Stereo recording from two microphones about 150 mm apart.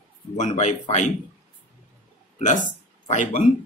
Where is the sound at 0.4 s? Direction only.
45° left (ahead or behind).